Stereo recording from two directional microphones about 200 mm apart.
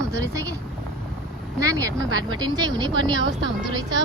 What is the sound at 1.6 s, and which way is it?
Speech, 15° right (ahead or behind).